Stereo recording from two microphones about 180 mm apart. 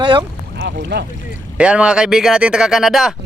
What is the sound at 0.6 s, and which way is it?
Speech, 70° right (ahead or behind).